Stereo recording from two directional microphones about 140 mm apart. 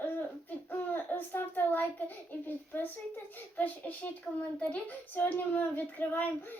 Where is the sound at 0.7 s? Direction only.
15° left (ahead or behind).